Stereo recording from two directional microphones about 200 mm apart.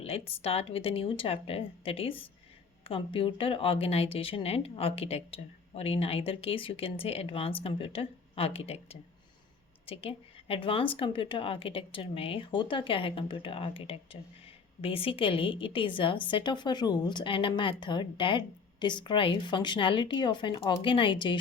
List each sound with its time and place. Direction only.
0.0 s speech: 30° left (ahead or behind)